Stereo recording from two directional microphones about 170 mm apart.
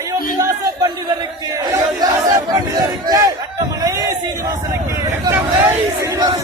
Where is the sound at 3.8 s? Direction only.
20° right (ahead or behind).